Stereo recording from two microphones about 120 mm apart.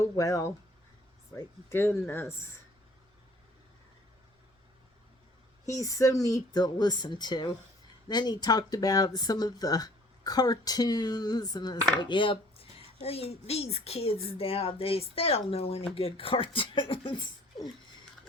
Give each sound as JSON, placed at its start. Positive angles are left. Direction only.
{"t": 0.2, "sound": "speech", "side_deg": 30}
{"t": 1.7, "sound": "speech", "side_deg": 20}
{"t": 5.6, "sound": "speech", "side_deg": 25}